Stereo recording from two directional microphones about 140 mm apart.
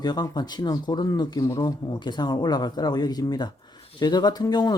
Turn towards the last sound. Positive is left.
turn(degrees=30)  # may be behind; listen again after turning